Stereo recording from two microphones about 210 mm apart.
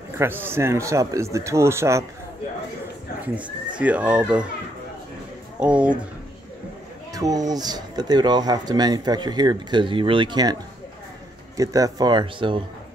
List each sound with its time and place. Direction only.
0.2 s speech: 10° right (ahead or behind)
3.3 s speech: 5° right (ahead or behind)
5.6 s speech: 5° right (ahead or behind)
7.2 s speech: 15° right (ahead or behind)